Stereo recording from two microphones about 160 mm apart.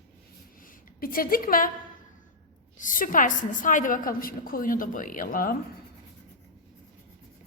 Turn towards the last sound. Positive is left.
turn(degrees=60)  # may be behind; listen again after turning